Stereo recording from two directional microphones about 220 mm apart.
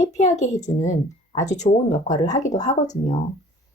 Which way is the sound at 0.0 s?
35° left (ahead or behind).